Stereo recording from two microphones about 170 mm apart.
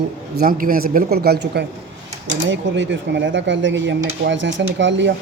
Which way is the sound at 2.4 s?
90° right.